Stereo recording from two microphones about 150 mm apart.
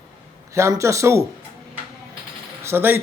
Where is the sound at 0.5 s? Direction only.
20° right (ahead or behind).